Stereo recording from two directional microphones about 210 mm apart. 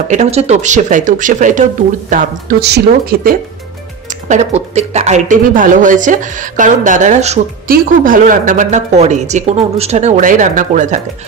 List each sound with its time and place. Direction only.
0.1 s speech: 30° right (ahead or behind)
2.6 s speech: 50° right (ahead or behind)
4.3 s speech: 30° right (ahead or behind)